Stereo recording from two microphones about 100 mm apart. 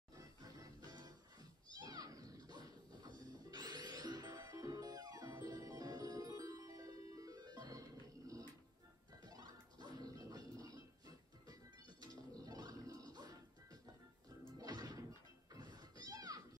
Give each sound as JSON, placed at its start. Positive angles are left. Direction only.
{"t": 0.1, "sound": "music", "side_deg": -40}